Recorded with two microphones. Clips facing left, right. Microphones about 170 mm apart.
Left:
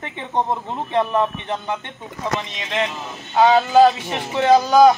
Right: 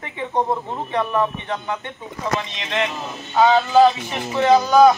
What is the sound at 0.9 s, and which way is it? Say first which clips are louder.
Speech: left 2 dB; 25° left (ahead or behind).